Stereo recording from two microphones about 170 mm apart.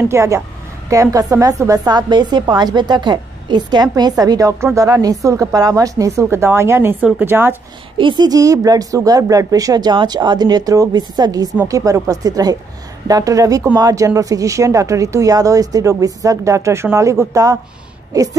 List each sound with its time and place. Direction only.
0.1 s a woman's voice: 15° right (ahead or behind)
8.0 s a woman's voice: 25° right (ahead or behind)